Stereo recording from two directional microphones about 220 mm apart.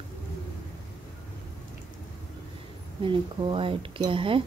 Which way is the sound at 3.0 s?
25° right (ahead or behind).